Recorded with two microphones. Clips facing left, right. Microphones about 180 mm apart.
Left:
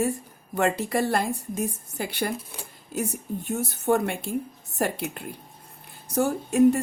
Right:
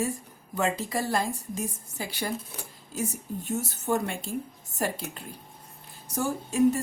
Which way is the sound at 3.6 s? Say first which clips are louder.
Left 5 dB; 60° left (ahead or behind).